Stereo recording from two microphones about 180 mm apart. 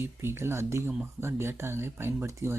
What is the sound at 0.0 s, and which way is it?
Speech, 15° right (ahead or behind).